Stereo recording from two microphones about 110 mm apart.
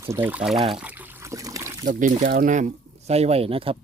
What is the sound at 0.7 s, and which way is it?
Speech, 10° right (ahead or behind).